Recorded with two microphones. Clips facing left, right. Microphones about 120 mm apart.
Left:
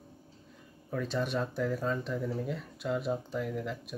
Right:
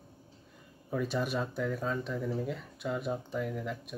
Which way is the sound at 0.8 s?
10° right (ahead or behind).